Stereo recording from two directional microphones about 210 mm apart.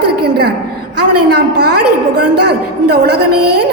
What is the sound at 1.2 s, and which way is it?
A man's voice, 50° right (ahead or behind).